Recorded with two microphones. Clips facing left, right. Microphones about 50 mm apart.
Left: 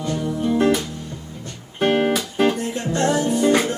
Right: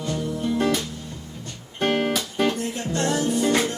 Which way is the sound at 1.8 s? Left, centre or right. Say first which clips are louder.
Left 4 dB; centre.